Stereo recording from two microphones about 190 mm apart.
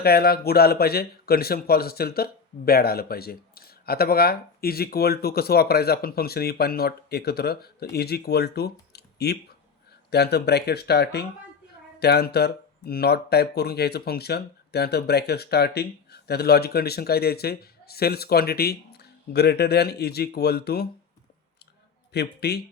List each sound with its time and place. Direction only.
0.0 s speech: 55° left (ahead or behind)
22.1 s speech: 60° left (ahead or behind)